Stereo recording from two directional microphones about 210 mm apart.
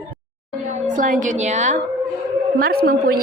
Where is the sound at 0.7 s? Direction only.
35° right (ahead or behind).